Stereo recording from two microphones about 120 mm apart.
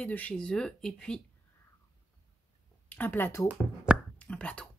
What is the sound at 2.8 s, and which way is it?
Speech, 15° left (ahead or behind).